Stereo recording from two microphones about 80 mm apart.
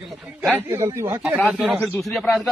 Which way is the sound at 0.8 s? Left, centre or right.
Right.